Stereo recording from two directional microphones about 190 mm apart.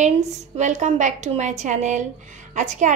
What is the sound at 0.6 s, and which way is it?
A woman's voice, 40° right (ahead or behind).